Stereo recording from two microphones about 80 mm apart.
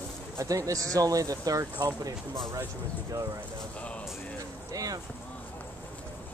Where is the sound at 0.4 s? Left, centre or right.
Right.